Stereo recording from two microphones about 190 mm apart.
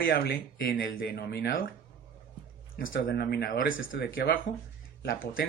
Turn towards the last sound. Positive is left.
turn(degrees=50)  # may be behind; listen again after turning